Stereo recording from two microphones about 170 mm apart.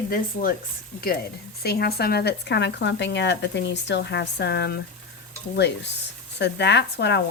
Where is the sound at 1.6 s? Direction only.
70° left (ahead or behind); by 7.2 s 90° left.